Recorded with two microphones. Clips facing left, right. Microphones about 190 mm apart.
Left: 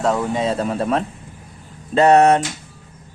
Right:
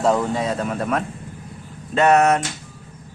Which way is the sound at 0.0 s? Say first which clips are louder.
Right 1 dB; centre (ahead or behind).